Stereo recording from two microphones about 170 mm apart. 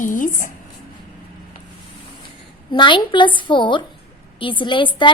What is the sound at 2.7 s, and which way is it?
A woman's voice, 30° left (ahead or behind).